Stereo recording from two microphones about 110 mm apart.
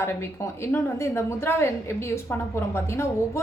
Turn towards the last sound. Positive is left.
turn(degrees=25)  # may be behind; listen again after turning